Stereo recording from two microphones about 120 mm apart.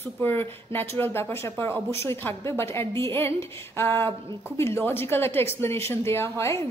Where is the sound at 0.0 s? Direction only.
15° left (ahead or behind).